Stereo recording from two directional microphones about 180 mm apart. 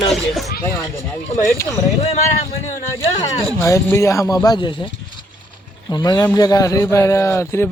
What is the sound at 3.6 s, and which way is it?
A man's voice, 15° left (ahead or behind).